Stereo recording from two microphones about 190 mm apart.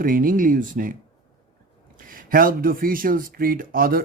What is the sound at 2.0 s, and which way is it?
Speech, 50° right (ahead or behind).